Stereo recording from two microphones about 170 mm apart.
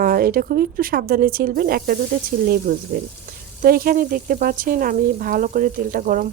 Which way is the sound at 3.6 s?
60° right (ahead or behind).